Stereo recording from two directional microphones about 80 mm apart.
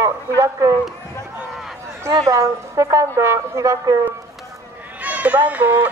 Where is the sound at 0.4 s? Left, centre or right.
Right.